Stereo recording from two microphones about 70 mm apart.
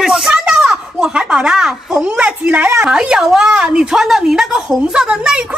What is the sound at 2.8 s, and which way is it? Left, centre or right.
Speech, centre.